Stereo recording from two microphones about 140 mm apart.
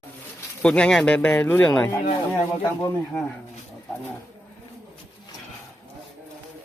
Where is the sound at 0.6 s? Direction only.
5° left (ahead or behind).